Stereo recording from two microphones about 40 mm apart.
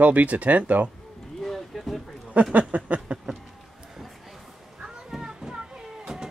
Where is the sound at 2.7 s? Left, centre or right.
Right.